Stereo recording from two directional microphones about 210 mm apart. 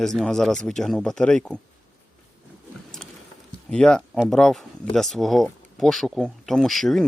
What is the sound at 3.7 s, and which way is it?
Speech, 5° left (ahead or behind).